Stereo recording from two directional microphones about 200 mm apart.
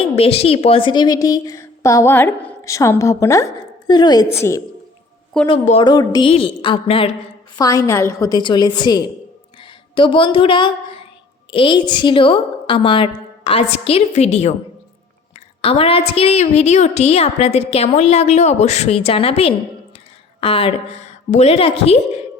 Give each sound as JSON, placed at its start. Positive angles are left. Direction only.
{"t": 0.0, "sound": "a woman's voice", "side_deg": 30}
{"t": 5.5, "sound": "a woman's voice", "side_deg": 25}
{"t": 7.6, "sound": "a woman's voice", "side_deg": 15}
{"t": 15.6, "sound": "a woman's voice", "side_deg": 30}